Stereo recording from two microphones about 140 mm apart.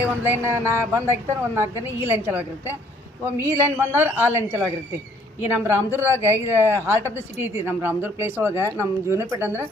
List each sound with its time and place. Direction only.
0.0 s speech: 15° right (ahead or behind)